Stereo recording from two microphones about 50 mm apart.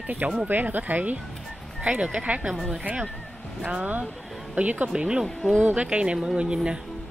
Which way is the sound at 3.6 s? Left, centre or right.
Right.